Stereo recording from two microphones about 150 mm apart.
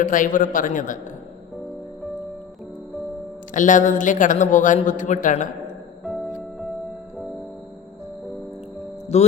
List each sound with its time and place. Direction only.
0.0 s a man's voice: 60° left (ahead or behind)
3.5 s a man's voice: 60° left (ahead or behind)
6.1 s music: centre (ahead or behind)
9.1 s music: 45° left (ahead or behind)